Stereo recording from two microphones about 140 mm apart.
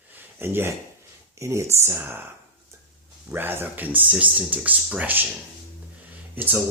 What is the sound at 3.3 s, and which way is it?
Speech, 15° right (ahead or behind).